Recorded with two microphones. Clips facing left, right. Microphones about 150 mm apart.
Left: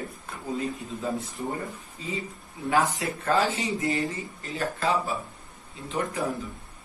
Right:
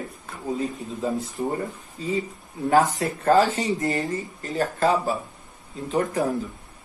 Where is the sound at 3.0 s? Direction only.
40° right (ahead or behind).